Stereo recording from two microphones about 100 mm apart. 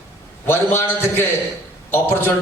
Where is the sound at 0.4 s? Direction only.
25° left (ahead or behind).